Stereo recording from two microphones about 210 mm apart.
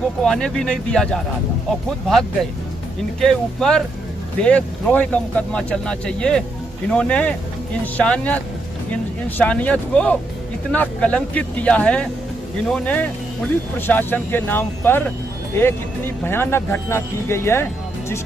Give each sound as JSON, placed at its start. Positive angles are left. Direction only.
{"t": 0.2, "sound": "speech", "side_deg": 5}
{"t": 9.4, "sound": "speech", "side_deg": 5}